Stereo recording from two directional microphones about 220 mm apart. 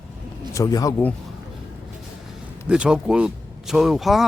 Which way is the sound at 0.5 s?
15° left (ahead or behind).